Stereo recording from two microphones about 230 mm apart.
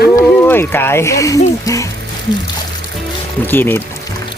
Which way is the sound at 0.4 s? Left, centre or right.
Centre.